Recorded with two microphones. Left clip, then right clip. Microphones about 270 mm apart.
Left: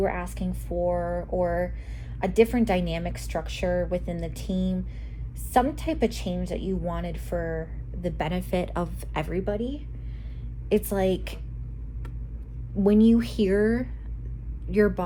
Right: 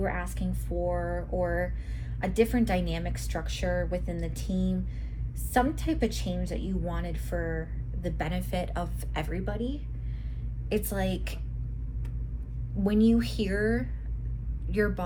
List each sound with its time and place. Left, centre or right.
0.0 s a woman's voice: left
4.4 s speech: left
5.5 s a woman's voice: left
10.7 s a woman's voice: left
12.8 s a woman's voice: left